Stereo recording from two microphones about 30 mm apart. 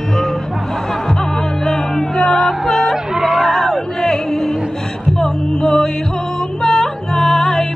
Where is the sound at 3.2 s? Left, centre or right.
Centre.